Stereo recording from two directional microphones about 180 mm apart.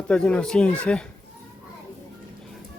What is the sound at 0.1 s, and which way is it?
Speech, 5° left (ahead or behind).